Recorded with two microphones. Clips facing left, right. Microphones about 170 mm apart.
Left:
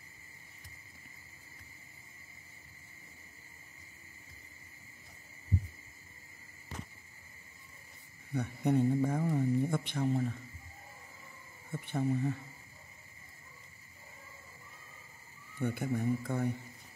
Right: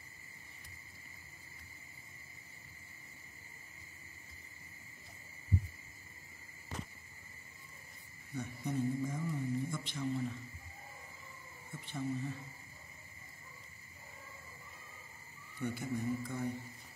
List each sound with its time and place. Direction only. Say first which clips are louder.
8.3 s speech: left 9 dB; 60° left (ahead or behind)
11.7 s speech: left 6 dB; 55° left (ahead or behind)
15.6 s speech: left 4 dB; 60° left (ahead or behind)